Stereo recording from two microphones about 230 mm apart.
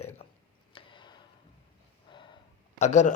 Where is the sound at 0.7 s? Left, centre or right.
Left.